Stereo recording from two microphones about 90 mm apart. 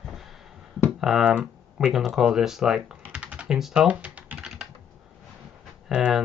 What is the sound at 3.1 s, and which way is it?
Typing, 10° right (ahead or behind).